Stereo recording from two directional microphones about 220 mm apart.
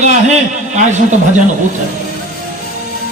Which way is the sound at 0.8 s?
35° right (ahead or behind).